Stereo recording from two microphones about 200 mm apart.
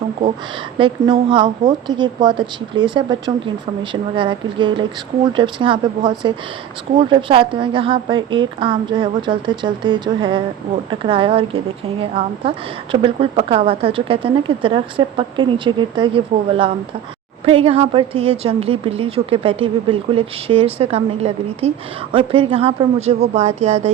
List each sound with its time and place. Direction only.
0.8 s a woman's voice: 25° right (ahead or behind)